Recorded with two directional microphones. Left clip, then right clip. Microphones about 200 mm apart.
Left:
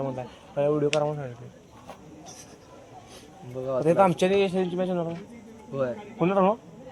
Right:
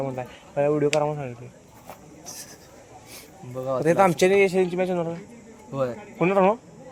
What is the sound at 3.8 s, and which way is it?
A man's voice, 30° right (ahead or behind).